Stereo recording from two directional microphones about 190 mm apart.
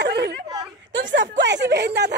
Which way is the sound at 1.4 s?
65° right (ahead or behind).